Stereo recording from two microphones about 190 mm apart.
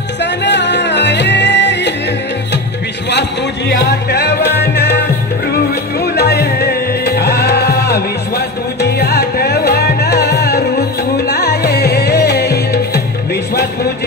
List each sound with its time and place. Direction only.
0.2 s music: 65° left (ahead or behind)
3.1 s music: 65° left (ahead or behind)
5.9 s music: 55° left (ahead or behind)